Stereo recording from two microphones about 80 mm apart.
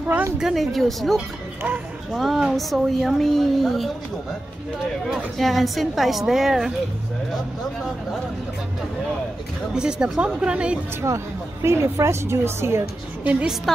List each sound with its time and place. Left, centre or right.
0.4 s speech: centre
5.0 s speech: centre
9.8 s a woman's voice: centre
11.6 s a woman's voice: right
13.2 s a woman's voice: centre
13.7 s speech: centre